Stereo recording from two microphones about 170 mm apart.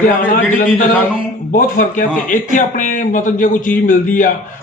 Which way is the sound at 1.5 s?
55° left (ahead or behind).